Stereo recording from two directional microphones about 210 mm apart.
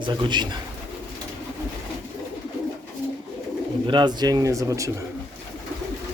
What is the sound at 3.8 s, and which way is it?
Speech, 20° right (ahead or behind).